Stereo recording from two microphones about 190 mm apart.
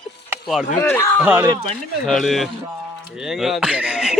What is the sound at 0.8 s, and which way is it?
Speech, 10° left (ahead or behind).